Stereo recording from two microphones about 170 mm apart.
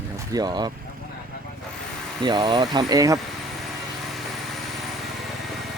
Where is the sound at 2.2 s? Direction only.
25° right (ahead or behind).